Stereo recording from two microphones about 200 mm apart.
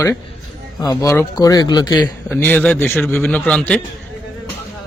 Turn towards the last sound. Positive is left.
turn(degrees=5)  # may be behind; listen again after turning